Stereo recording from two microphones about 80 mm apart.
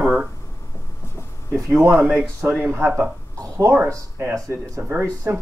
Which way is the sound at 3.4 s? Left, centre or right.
Right.